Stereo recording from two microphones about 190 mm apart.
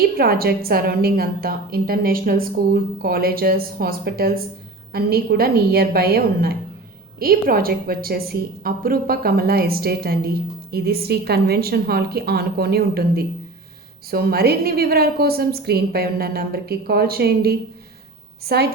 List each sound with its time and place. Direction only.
0.2 s a woman's voice: 50° right (ahead or behind)